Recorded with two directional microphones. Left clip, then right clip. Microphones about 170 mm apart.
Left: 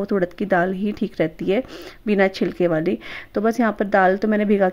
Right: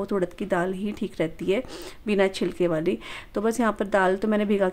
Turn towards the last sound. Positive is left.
turn(degrees=15)  # may be behind; listen again after turning